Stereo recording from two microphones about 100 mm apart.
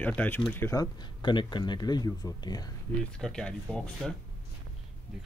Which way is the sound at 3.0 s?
5° left (ahead or behind).